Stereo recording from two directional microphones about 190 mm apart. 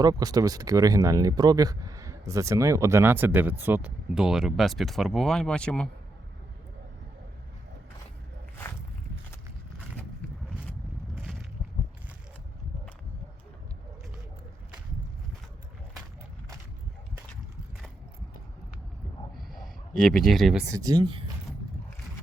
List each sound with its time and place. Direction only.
0.0 s speech: 20° right (ahead or behind); by 5.9 s 5° left (ahead or behind)
19.4 s a sound: centre (ahead or behind)
20.7 s speech: 20° right (ahead or behind)